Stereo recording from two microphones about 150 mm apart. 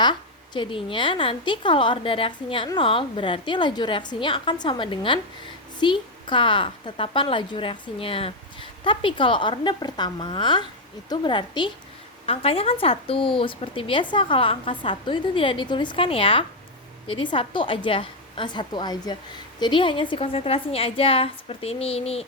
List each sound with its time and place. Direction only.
0.0 s speech: 30° left (ahead or behind)